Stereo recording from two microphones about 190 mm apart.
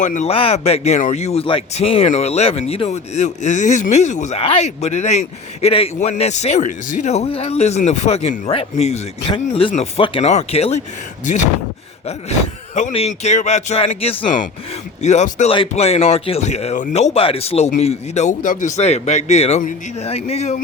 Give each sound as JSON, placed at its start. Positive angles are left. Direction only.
{"t": 0.0, "sound": "speech", "side_deg": 40}
{"t": 12.7, "sound": "speech", "side_deg": 35}
{"t": 15.0, "sound": "speech", "side_deg": 35}